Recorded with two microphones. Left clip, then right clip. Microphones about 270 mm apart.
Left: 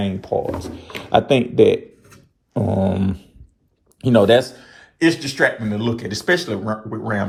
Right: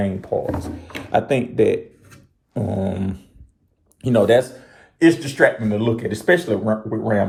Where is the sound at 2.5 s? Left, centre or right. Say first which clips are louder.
Left 4 dB; left.